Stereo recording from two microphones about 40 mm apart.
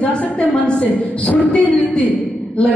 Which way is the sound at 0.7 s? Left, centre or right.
Left.